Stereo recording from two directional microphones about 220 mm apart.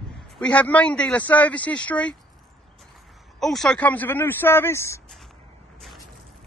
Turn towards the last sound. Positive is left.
turn(degrees=10)  # may be behind; listen again after turning